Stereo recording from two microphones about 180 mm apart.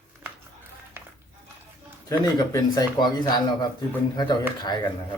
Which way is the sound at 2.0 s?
20° left (ahead or behind).